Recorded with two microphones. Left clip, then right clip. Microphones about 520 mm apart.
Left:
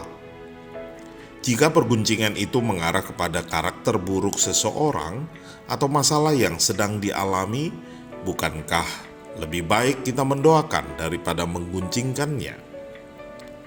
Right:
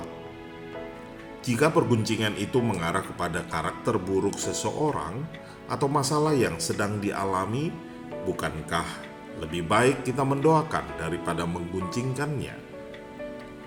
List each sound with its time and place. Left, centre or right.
1.5 s speech: centre